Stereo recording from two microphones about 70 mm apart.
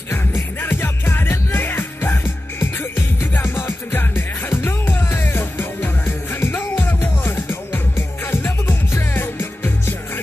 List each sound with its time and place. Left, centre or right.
0.1 s music: left